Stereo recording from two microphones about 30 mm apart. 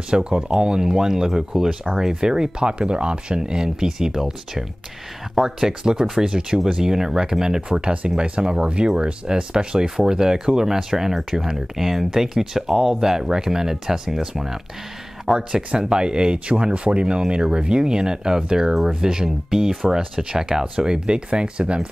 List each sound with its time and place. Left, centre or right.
0.1 s speech: right
2.9 s speech: right
3.3 s speech: right
16.7 s speech: right
17.3 s speech: right